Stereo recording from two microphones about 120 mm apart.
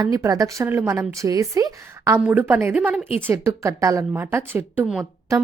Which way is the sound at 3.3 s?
25° right (ahead or behind).